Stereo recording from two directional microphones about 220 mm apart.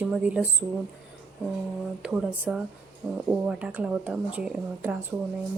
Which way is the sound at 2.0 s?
5° right (ahead or behind).